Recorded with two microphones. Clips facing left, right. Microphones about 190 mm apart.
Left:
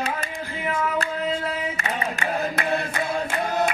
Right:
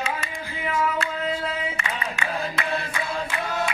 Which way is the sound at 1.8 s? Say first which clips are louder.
Left 3 dB; 40° left (ahead or behind).